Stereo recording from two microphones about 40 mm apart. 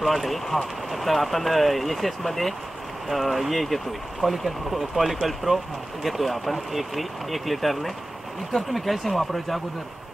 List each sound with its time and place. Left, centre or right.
0.0 s speech: centre